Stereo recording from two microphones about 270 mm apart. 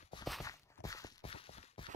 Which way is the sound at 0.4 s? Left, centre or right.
Centre.